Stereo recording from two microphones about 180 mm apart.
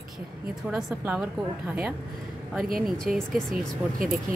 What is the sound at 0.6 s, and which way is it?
A woman's voice, 5° right (ahead or behind).